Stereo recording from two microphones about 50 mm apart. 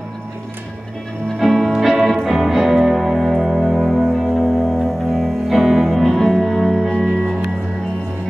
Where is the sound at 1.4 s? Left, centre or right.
Centre.